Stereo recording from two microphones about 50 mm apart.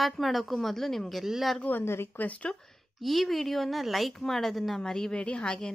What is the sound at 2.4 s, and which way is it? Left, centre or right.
Speech, centre.